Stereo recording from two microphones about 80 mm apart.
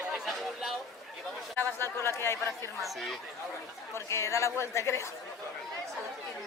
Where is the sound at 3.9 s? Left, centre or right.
Left.